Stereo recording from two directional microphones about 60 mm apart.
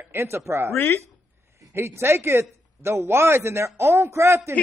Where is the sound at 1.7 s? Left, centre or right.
Right.